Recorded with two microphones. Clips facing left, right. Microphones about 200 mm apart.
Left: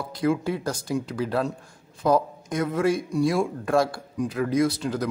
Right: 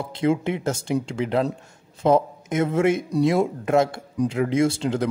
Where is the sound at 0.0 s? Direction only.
25° right (ahead or behind).